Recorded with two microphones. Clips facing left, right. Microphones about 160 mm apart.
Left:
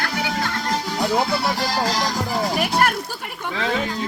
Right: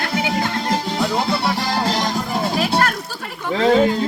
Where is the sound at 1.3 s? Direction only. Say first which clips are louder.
Right 2 dB; 25° right (ahead or behind).